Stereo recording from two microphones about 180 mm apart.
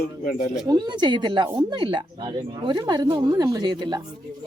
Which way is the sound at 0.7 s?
25° right (ahead or behind).